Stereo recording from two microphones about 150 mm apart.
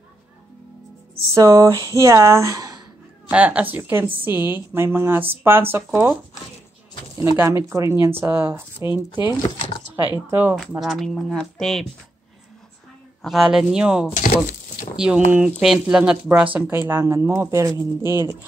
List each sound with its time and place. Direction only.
1.3 s speech: 20° right (ahead or behind)
3.3 s speech: 10° right (ahead or behind)
7.3 s speech: 15° right (ahead or behind)
10.8 s speech: centre (ahead or behind)
13.2 s speech: centre (ahead or behind)
14.1 s a sound: 60° left (ahead or behind)
15.0 s speech: 5° right (ahead or behind)